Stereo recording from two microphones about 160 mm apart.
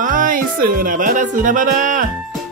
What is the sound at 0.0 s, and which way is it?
Music, 55° right (ahead or behind).